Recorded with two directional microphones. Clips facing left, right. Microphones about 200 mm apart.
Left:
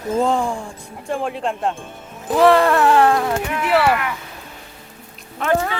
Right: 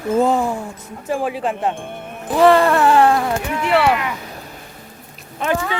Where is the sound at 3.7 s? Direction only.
5° left (ahead or behind).